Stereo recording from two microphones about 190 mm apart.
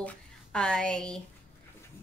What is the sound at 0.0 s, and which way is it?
A woman's voice, 5° left (ahead or behind).